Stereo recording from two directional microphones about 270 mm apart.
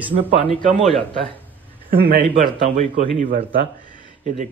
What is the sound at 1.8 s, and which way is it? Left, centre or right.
A man's voice, right.